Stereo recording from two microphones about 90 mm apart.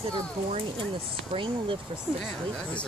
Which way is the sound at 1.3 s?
70° right (ahead or behind).